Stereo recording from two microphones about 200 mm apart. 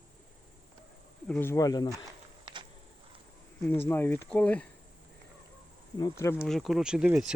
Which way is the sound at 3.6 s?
10° left (ahead or behind).